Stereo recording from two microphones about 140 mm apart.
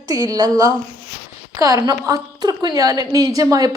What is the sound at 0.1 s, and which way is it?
A woman's voice, 25° right (ahead or behind).